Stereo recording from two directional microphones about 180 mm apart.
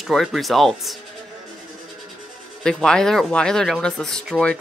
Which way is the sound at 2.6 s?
5° left (ahead or behind).